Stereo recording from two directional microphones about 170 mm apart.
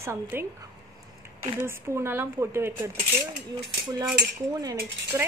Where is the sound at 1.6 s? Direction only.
15° right (ahead or behind).